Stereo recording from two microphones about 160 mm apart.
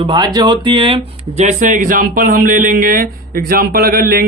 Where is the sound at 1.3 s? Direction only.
50° right (ahead or behind).